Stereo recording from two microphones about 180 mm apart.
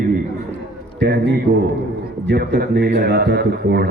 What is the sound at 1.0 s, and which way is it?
A man's voice, 65° right (ahead or behind).